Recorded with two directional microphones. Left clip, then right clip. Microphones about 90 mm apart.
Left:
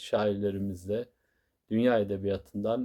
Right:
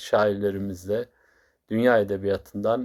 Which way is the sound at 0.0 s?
20° left (ahead or behind).